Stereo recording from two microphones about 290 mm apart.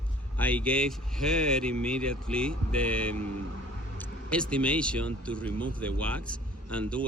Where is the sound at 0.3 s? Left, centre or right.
Centre.